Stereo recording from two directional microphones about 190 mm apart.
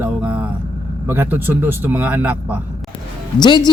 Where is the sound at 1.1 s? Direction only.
10° right (ahead or behind).